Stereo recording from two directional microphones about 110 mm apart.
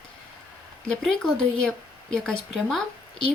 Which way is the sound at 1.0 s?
5° left (ahead or behind).